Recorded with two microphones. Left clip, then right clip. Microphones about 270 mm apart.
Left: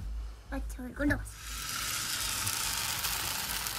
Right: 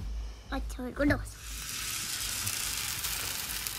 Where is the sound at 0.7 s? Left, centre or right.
Centre.